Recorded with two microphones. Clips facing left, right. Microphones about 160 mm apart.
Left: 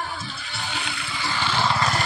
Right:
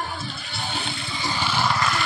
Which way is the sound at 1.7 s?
35° left (ahead or behind).